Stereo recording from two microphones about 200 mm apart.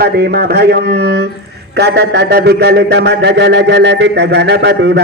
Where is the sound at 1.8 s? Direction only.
55° right (ahead or behind).